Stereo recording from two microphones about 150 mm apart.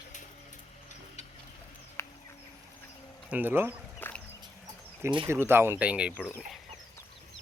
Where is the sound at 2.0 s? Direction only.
20° left (ahead or behind).